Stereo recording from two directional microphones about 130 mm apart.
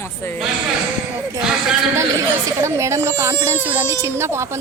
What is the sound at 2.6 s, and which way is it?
A child's voice, 20° right (ahead or behind).